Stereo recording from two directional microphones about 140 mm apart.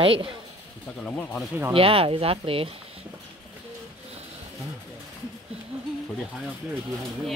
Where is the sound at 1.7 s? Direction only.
40° right (ahead or behind).